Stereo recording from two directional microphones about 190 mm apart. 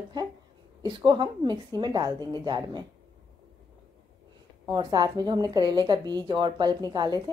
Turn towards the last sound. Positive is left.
turn(degrees=-20)  # may be behind; listen again after turning